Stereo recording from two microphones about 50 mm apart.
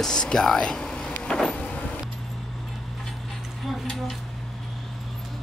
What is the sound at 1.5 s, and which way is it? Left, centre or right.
Power windows, left.